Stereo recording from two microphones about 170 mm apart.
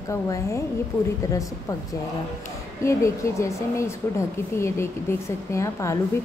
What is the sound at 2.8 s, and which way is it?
A woman's voice, 15° left (ahead or behind).